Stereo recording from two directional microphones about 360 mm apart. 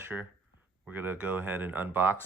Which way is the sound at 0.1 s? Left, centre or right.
Centre.